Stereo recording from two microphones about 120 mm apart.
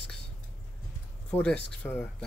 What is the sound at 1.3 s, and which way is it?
Speech, 10° left (ahead or behind).